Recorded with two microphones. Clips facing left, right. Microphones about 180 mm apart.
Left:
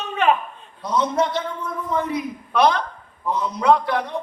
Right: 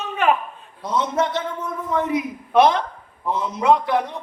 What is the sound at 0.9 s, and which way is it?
A man's voice, 20° right (ahead or behind).